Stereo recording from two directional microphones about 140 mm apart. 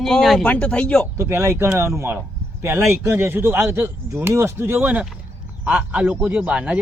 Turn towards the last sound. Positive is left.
turn(degrees=-5)  # may be behind; listen again after turning